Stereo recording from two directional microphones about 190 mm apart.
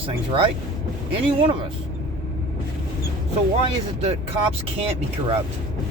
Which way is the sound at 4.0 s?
30° right (ahead or behind).